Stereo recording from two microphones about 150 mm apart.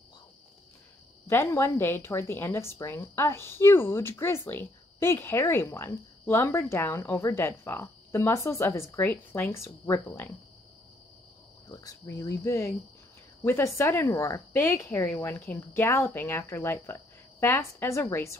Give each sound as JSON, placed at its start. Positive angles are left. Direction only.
{"t": 1.2, "sound": "a woman's voice", "side_deg": 20}
{"t": 11.7, "sound": "a woman's voice", "side_deg": 20}